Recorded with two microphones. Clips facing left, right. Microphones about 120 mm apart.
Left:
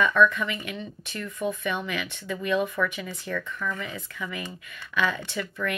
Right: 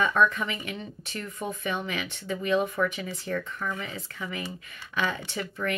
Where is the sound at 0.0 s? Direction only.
40° right (ahead or behind).